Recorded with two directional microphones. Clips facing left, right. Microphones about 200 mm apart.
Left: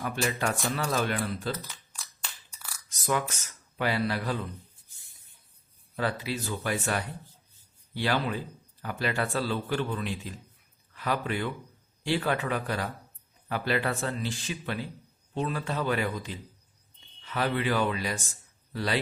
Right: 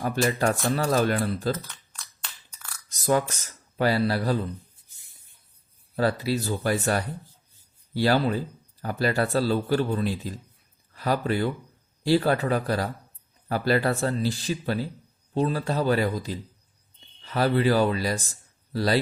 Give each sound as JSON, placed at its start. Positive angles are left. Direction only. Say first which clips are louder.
{"t": 0.0, "sound": "speech", "louder": "right 6 dB", "side_deg": -40}
{"t": 1.6, "sound": "a sound", "louder": "even", "side_deg": 5}
{"t": 3.1, "sound": "speech", "louder": "right 6 dB", "side_deg": -35}
{"t": 6.0, "sound": "a man's voice", "louder": "right 6 dB", "side_deg": -40}